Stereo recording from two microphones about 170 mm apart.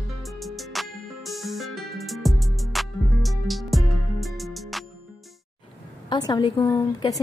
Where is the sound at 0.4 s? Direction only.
Centre (ahead or behind).